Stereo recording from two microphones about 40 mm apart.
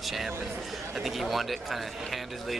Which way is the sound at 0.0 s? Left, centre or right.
Centre.